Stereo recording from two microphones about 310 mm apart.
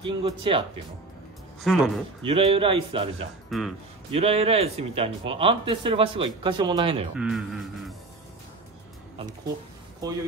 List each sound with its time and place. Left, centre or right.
0.0 s speech: centre
1.6 s a man's voice: centre
2.2 s speech: centre
3.4 s speech: centre
4.1 s speech: centre
7.2 s a man's voice: centre
10.0 s speech: centre